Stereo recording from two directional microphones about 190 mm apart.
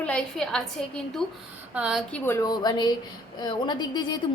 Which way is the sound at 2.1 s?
10° left (ahead or behind).